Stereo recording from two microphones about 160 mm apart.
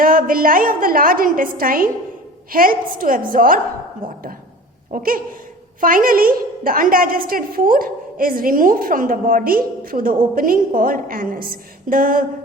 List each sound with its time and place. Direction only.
0.0 s a woman's voice: 60° right (ahead or behind)
4.0 s speech: 30° right (ahead or behind)
4.9 s a woman's voice: 60° right (ahead or behind)